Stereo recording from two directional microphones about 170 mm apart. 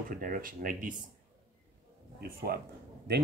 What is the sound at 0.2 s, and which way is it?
Speech, 55° right (ahead or behind).